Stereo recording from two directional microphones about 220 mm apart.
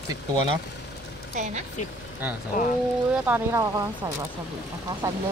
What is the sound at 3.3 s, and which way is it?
Speech, 15° right (ahead or behind).